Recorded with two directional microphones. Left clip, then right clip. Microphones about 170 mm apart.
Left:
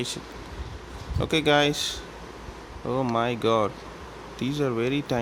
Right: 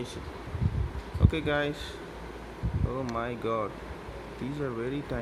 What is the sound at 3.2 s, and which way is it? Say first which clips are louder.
Speech: left 8 dB; 70° left (ahead or behind).